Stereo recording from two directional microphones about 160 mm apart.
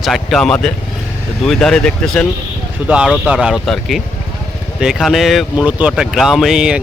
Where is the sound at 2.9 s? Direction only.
5° right (ahead or behind).